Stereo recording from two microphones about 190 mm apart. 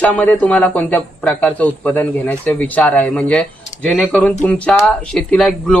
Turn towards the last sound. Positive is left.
turn(degrees=5)  # may be behind; listen again after turning